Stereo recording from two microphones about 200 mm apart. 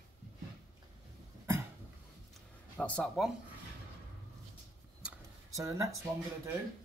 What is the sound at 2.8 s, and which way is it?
Speech, 5° left (ahead or behind).